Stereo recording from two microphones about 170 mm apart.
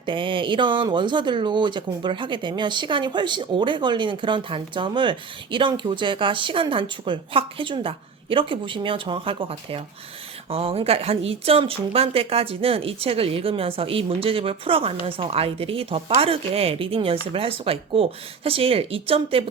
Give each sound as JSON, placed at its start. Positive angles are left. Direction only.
{"t": 0.0, "sound": "speech", "side_deg": -30}